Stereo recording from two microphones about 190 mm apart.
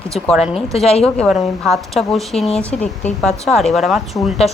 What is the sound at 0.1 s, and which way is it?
Speech, centre (ahead or behind).